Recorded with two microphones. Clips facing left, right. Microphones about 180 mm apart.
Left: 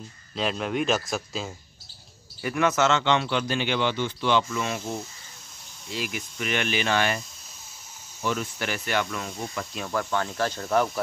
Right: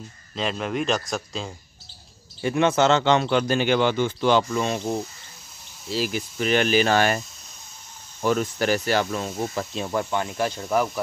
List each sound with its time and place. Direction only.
0.4 s speech: centre (ahead or behind)
2.4 s speech: 25° right (ahead or behind)
8.2 s speech: 40° right (ahead or behind); by 10.9 s 10° right (ahead or behind)